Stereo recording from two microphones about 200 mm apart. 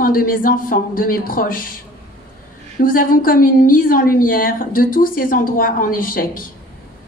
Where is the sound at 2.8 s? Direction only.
45° left (ahead or behind).